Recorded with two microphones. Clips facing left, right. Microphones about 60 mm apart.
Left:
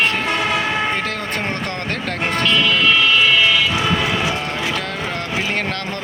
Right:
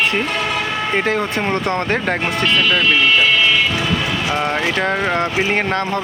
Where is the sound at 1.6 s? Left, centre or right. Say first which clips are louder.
Right 6 dB; right.